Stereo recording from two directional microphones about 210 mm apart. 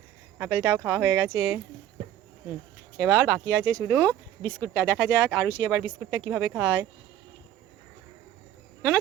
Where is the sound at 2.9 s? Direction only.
5° right (ahead or behind).